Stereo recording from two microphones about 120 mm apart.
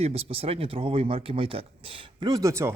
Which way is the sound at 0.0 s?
55° right (ahead or behind).